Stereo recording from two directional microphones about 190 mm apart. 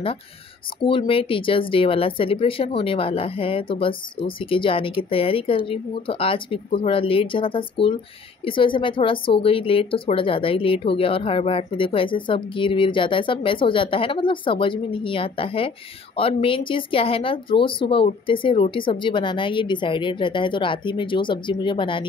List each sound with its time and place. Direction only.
0.8 s speech: 30° left (ahead or behind)